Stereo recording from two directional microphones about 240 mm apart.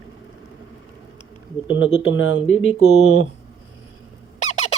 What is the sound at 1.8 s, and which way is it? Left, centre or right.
Speech, left.